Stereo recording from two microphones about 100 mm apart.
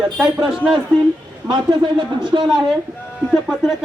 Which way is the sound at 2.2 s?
50° right (ahead or behind).